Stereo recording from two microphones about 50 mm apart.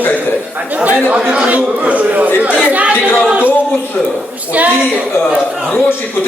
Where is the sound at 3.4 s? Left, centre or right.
Left.